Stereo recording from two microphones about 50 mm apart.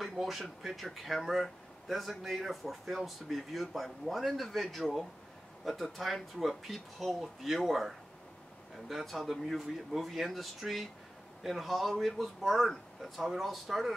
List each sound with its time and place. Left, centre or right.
0.0 s speech: centre